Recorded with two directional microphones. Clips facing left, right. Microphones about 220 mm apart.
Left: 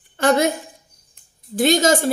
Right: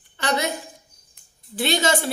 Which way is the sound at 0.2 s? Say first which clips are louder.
Left 8 dB; 50° left (ahead or behind).